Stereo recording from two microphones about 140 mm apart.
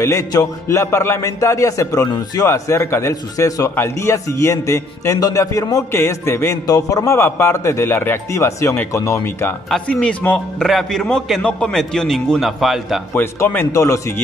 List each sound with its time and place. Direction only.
0.0 s a man's voice: 25° left (ahead or behind)
9.7 s a man's voice: 5° left (ahead or behind)
13.1 s a man's voice: 15° left (ahead or behind)